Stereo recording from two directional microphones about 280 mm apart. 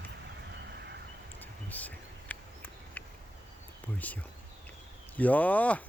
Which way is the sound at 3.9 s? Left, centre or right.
Centre.